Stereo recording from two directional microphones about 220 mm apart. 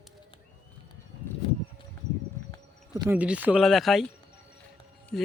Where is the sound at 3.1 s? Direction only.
5° right (ahead or behind).